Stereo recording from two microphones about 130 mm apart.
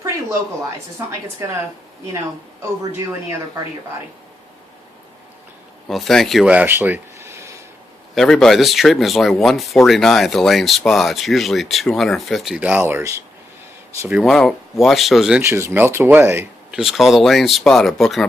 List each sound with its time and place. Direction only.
1.4 s speech: 20° right (ahead or behind)
5.9 s speech: centre (ahead or behind)
6.4 s speech: 10° right (ahead or behind)
8.1 s speech: 5° left (ahead or behind); by 13.2 s 20° right (ahead or behind)
14.1 s speech: centre (ahead or behind)
15.4 s speech: 20° right (ahead or behind)
16.7 s speech: centre (ahead or behind)